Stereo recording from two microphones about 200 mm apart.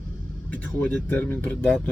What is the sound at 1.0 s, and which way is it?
Speech, 10° left (ahead or behind).